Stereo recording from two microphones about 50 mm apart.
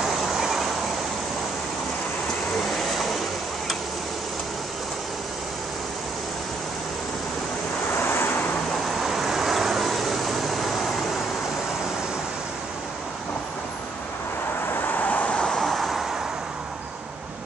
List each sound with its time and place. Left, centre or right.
0.2 s vehicle: centre
2.8 s vehicle: centre
8.0 s waves: left
8.8 s vehicle: centre
14.7 s vehicle: left
15.2 s vehicle: centre
15.7 s vehicle: centre